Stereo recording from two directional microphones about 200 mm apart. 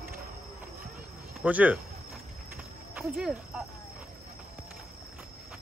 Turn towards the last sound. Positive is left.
turn(degrees=-5)  # may be behind; listen again after turning